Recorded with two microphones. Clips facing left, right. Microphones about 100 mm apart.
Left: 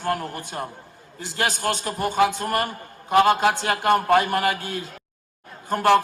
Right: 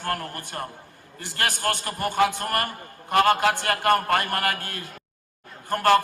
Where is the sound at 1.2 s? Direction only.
55° right (ahead or behind).